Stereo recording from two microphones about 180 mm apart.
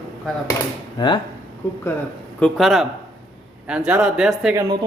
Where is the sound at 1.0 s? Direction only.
25° left (ahead or behind).